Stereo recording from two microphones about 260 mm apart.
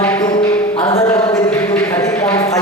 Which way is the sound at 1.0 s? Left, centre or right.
Centre.